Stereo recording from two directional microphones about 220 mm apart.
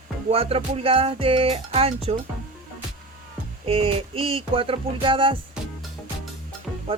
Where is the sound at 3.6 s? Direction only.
25° right (ahead or behind).